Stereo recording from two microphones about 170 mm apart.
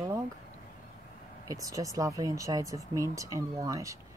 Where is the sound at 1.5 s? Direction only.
20° right (ahead or behind).